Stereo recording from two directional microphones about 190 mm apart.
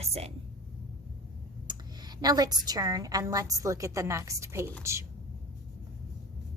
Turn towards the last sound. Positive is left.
turn(degrees=-15)  # may be behind; listen again after turning